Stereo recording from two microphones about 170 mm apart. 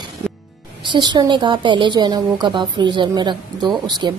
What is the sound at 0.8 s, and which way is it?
Speech, 25° right (ahead or behind).